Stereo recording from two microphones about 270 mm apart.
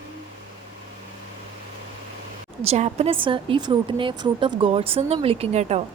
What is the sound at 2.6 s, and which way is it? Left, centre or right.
A woman's voice, right.